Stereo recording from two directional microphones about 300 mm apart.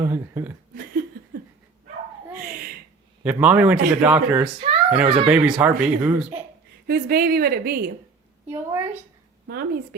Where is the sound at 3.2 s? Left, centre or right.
Centre.